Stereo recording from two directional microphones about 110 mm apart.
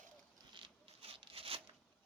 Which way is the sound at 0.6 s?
55° right (ahead or behind).